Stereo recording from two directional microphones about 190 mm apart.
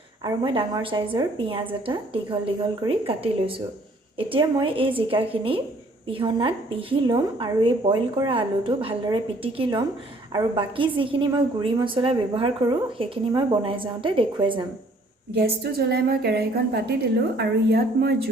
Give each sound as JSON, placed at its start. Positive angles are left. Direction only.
{"t": 0.2, "sound": "a woman's voice", "side_deg": -25}
{"t": 4.3, "sound": "a woman's voice", "side_deg": -25}
{"t": 15.3, "sound": "a woman's voice", "side_deg": -55}